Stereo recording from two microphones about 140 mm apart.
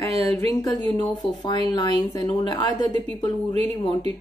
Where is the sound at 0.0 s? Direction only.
25° left (ahead or behind).